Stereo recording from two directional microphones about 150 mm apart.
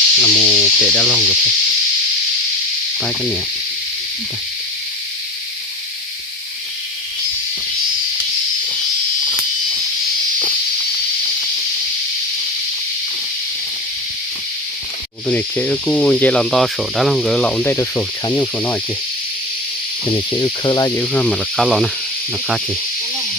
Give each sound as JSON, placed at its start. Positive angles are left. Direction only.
{"t": 0.2, "sound": "speech", "side_deg": -5}
{"t": 3.0, "sound": "speech", "side_deg": 5}
{"t": 15.3, "sound": "speech", "side_deg": 10}
{"t": 20.4, "sound": "speech", "side_deg": 30}
{"t": 21.0, "sound": "speech", "side_deg": 10}